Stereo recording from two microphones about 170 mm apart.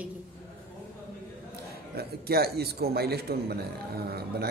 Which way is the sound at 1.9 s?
65° right (ahead or behind).